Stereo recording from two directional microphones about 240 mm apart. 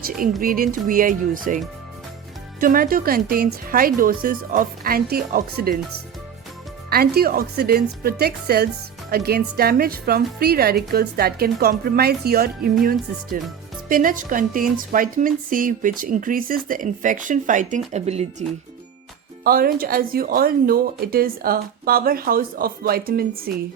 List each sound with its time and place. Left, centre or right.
0.4 s a woman's voice: right
6.9 s a woman's voice: right
19.5 s a woman's voice: right